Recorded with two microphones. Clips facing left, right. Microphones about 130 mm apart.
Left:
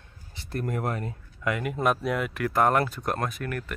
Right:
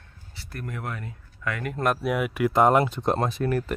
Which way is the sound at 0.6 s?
40° left (ahead or behind).